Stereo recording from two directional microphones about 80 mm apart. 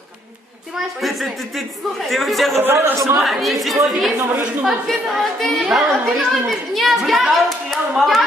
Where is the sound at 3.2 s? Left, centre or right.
Centre.